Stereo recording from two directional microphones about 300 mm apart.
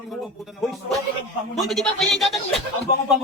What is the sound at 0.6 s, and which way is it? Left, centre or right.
Speech, centre.